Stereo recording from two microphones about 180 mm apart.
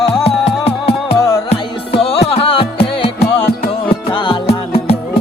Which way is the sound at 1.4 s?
35° left (ahead or behind).